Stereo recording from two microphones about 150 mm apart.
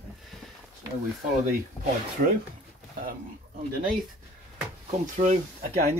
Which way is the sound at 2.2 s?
65° right (ahead or behind).